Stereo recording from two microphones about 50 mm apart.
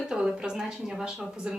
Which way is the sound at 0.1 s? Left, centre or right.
Centre.